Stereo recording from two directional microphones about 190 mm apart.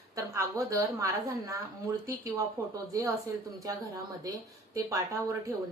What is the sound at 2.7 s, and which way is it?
Speech, 20° right (ahead or behind).